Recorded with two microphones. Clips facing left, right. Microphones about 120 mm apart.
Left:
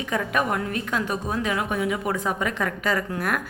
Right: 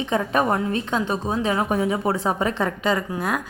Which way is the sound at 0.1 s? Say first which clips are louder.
Right 3 dB; 30° right (ahead or behind).